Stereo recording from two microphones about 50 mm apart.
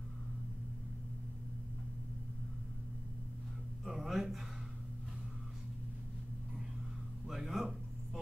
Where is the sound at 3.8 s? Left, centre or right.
Centre.